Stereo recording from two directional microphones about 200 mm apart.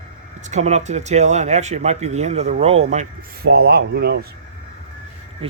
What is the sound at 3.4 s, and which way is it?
Speech, 55° right (ahead or behind).